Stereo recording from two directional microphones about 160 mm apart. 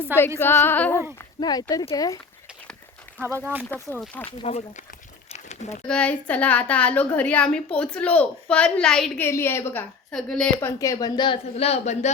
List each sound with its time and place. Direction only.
0.3 s a woman's voice: 15° left (ahead or behind)
1.4 s speech: 25° left (ahead or behind)
3.2 s speech: 15° right (ahead or behind)
4.0 s a woman's voice: 10° left (ahead or behind)
4.3 s speech: 40° left (ahead or behind)
5.3 s crumpling: 45° left (ahead or behind)
5.9 s a woman's voice: 10° left (ahead or behind)
9.2 s a woman's voice: 15° left (ahead or behind); by 12.1 s 45° left (ahead or behind)